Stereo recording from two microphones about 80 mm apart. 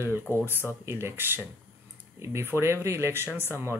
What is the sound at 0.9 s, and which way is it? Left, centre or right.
Speech, right.